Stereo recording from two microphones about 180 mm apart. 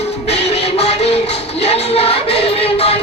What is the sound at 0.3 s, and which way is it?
Music, 35° left (ahead or behind).